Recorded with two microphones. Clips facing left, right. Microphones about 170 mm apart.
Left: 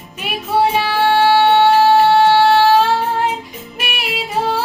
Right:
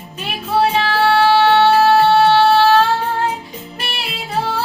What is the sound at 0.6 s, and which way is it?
Music, 15° left (ahead or behind).